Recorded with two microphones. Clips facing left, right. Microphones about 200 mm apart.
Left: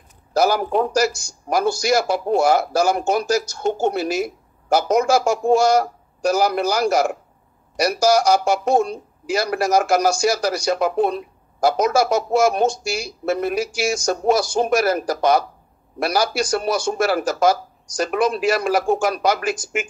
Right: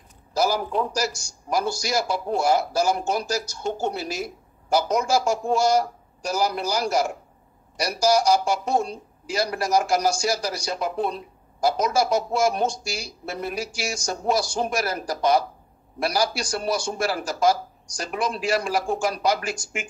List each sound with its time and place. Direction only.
0.3 s a man's voice: 65° left (ahead or behind)
13.2 s speech: 90° left
14.2 s a man's voice: 55° left (ahead or behind)
14.8 s a man's voice: 85° left
16.0 s a man's voice: 65° left (ahead or behind)